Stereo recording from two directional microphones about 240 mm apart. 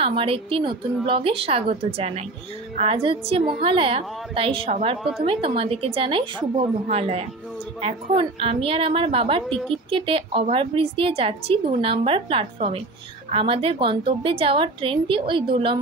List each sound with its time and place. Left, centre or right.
0.0 s a woman's voice: right